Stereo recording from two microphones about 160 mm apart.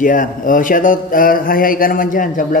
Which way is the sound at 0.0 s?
55° left (ahead or behind).